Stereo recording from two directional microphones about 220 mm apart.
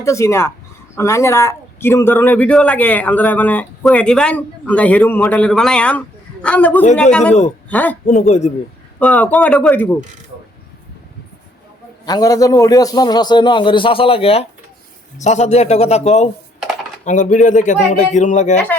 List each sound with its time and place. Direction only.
0.0 s speech: 15° left (ahead or behind)
8.0 s a man's voice: 30° left (ahead or behind)
9.0 s speech: 5° left (ahead or behind)
12.0 s a man's voice: 15° left (ahead or behind); by 18.6 s 35° left (ahead or behind)